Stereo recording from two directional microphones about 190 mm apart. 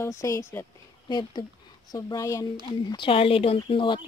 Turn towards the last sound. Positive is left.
turn(degrees=25)  # may be behind; listen again after turning